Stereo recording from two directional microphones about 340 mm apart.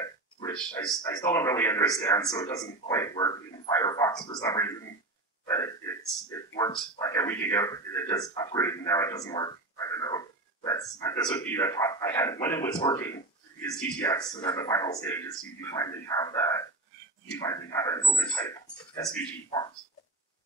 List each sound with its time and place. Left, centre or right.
0.0 s a man's voice: centre
6.5 s speech: centre